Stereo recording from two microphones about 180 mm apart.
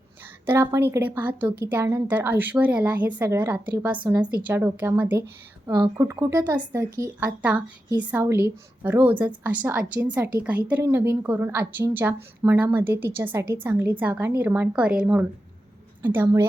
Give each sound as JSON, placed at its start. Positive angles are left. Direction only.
{"t": 0.4, "sound": "speech", "side_deg": -15}
{"t": 5.6, "sound": "speech", "side_deg": -25}